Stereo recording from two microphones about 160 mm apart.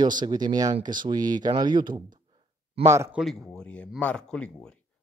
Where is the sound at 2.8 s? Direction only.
15° right (ahead or behind).